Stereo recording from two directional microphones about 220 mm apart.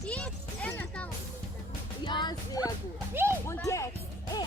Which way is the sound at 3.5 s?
10° left (ahead or behind).